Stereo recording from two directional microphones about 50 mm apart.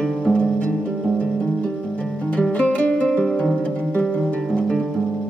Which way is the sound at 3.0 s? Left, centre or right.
Centre.